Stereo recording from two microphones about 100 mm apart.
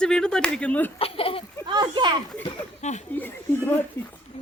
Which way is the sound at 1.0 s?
70° left (ahead or behind).